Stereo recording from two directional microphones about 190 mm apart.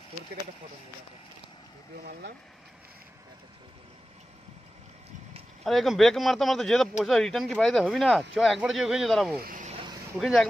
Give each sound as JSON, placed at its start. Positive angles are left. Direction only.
{"t": 5.6, "sound": "speech", "side_deg": 0}
{"t": 9.4, "sound": "speech", "side_deg": -45}
{"t": 10.1, "sound": "speech", "side_deg": 0}